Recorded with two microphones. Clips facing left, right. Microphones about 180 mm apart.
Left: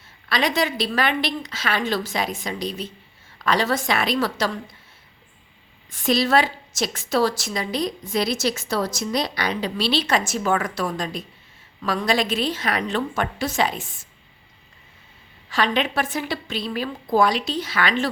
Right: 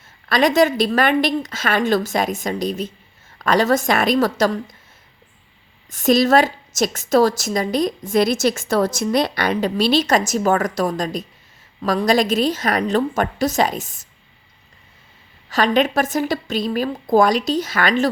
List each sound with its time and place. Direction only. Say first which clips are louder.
0.3 s a woman's voice: right 7 dB; 45° right (ahead or behind)
5.9 s a woman's voice: right 5 dB; 45° right (ahead or behind)
15.4 s a woman's voice: right 5 dB; 40° right (ahead or behind)